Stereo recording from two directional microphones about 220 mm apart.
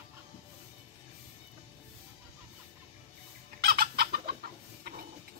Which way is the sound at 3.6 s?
45° right (ahead or behind).